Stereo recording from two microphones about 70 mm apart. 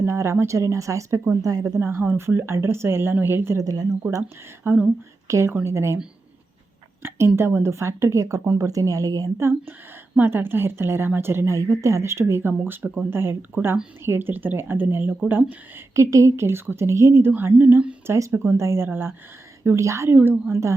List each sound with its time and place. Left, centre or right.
0.0 s a woman's voice: right
1.8 s a woman's voice: right
3.6 s speech: right
4.2 s speech: right
5.3 s a woman's voice: right
7.0 s a woman's voice: right
9.4 s a woman's voice: right
16.0 s a woman's voice: right
18.0 s a woman's voice: right
19.6 s a woman's voice: right
20.1 s speech: right
20.5 s a woman's voice: right